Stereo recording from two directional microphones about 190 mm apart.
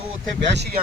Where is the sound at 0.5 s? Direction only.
60° right (ahead or behind).